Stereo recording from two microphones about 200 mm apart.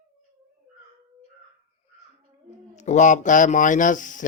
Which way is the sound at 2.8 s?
35° left (ahead or behind).